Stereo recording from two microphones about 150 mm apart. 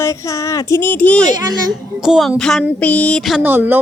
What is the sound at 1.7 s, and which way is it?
Speech, 5° right (ahead or behind).